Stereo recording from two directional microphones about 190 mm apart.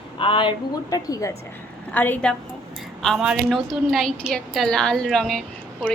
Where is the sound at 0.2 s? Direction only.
25° left (ahead or behind).